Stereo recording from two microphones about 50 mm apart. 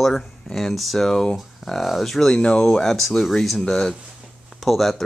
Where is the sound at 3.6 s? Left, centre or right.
Centre.